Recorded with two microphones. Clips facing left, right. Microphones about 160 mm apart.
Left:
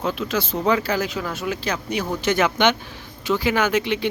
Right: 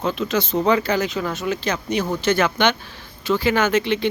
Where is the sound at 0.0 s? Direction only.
5° left (ahead or behind).